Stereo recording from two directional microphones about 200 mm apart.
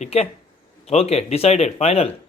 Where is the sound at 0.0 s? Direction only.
30° left (ahead or behind).